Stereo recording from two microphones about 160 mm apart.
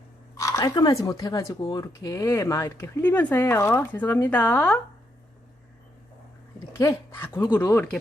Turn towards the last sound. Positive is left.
turn(degrees=10)  # may be behind; listen again after turning